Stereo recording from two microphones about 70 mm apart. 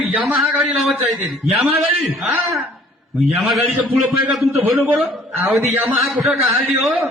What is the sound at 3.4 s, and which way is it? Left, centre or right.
A man's voice, centre.